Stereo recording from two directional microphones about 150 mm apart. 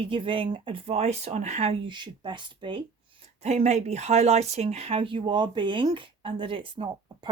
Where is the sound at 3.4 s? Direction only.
50° right (ahead or behind).